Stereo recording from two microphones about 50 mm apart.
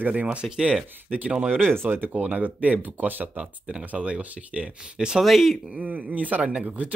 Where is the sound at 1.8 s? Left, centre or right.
Right.